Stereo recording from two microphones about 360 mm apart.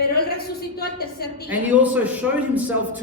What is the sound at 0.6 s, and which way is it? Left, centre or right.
Speech, left.